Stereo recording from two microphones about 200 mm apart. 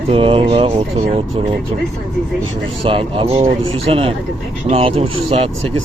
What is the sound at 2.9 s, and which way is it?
Speech, 25° right (ahead or behind).